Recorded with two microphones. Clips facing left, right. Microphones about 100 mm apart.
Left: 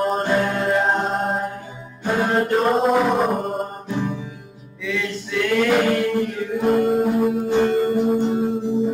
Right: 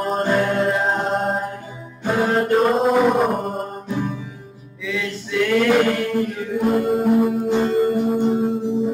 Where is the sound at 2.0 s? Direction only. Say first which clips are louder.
Right 1 dB; centre (ahead or behind).